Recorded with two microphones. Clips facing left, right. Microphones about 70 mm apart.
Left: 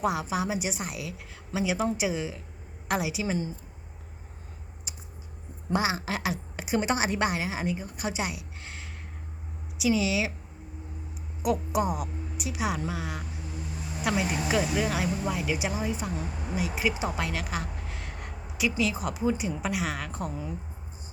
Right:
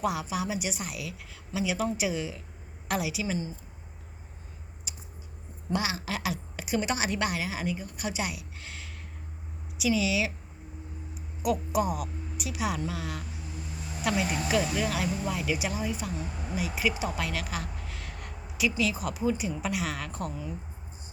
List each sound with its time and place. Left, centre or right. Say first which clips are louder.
0.0 s a woman's voice: left 2 dB; left
5.7 s a woman's voice: left 3 dB; left
11.4 s a woman's voice: left 1 dB; left